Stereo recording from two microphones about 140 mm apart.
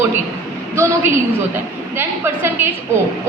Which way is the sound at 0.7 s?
20° right (ahead or behind).